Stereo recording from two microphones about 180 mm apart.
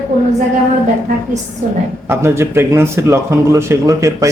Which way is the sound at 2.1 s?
15° right (ahead or behind).